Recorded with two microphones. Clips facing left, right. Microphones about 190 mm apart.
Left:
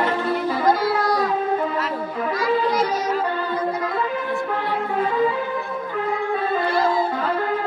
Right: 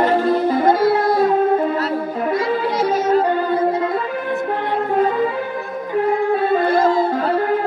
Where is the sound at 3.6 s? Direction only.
25° right (ahead or behind).